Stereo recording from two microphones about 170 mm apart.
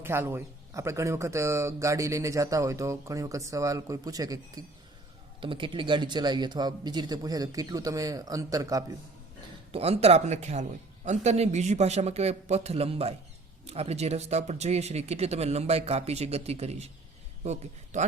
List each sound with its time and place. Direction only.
0.0 s speech: 15° right (ahead or behind)
9.7 s a man's voice: 35° right (ahead or behind)